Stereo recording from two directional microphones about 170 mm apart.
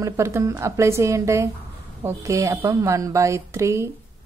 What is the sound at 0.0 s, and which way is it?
A woman's voice, 15° right (ahead or behind).